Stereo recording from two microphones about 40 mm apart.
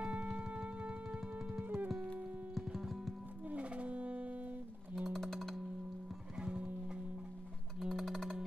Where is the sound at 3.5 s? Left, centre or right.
Right.